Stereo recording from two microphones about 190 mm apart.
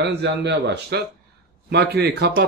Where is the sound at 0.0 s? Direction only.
60° right (ahead or behind).